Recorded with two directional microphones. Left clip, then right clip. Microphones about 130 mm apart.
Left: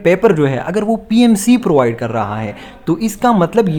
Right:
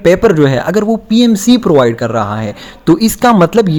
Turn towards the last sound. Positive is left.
turn(degrees=-40)  # may be behind; listen again after turning